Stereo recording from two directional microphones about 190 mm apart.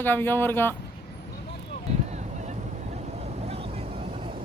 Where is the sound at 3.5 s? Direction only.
30° right (ahead or behind).